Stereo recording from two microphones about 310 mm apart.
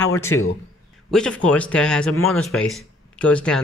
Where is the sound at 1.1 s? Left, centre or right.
Centre.